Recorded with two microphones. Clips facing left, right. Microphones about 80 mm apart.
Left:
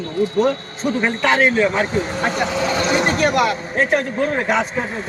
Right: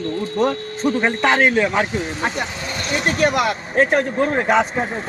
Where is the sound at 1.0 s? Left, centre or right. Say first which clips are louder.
Left 1 dB; right.